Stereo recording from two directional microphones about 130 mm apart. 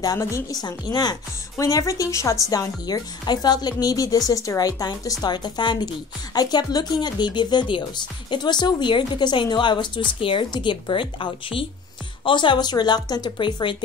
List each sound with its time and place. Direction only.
0.0 s speech: 25° left (ahead or behind)